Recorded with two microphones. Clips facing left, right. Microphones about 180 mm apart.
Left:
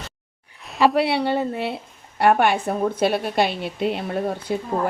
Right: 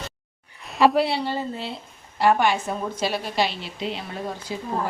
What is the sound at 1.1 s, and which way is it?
A woman's voice, 65° left (ahead or behind).